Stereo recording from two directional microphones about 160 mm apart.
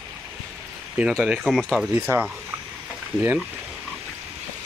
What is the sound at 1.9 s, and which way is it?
Speech, 10° right (ahead or behind).